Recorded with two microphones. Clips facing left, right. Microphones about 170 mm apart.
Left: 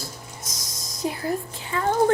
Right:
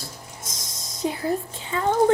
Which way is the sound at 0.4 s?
25° right (ahead or behind).